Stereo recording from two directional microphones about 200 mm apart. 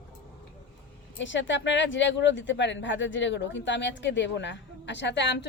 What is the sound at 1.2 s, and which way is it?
Speech, 65° left (ahead or behind).